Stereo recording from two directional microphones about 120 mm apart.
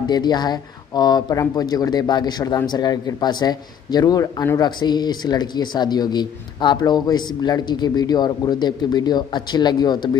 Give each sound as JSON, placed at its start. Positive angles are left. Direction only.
{"t": 0.0, "sound": "speech", "side_deg": 35}